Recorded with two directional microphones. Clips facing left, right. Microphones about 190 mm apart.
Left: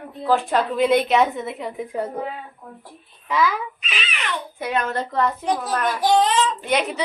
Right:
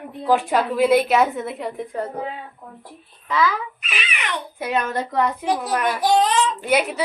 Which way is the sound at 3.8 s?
10° right (ahead or behind).